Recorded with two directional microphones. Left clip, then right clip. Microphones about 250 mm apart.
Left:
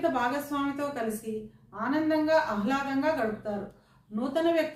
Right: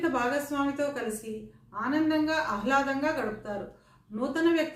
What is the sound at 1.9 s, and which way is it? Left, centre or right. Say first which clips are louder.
A man's voice: left 3 dB; centre.